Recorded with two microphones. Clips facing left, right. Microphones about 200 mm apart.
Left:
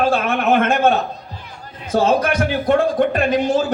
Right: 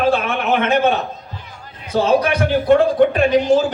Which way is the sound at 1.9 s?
45° left (ahead or behind).